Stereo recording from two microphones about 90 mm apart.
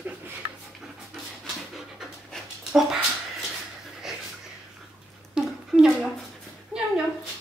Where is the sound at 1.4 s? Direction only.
Centre (ahead or behind).